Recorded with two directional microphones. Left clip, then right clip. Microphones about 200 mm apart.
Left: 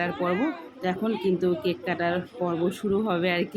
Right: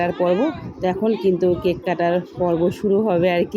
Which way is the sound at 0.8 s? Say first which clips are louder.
Right 8 dB; 10° right (ahead or behind).